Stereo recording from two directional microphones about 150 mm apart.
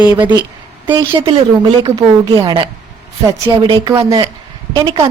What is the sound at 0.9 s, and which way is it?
A woman's voice, 30° right (ahead or behind).